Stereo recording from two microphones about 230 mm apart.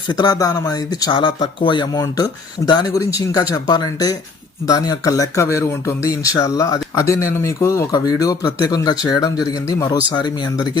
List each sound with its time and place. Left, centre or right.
0.1 s speech: centre